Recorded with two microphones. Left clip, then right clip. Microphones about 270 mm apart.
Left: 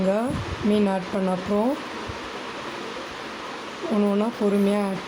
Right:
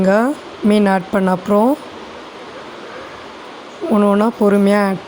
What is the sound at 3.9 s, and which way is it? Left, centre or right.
Speech, right.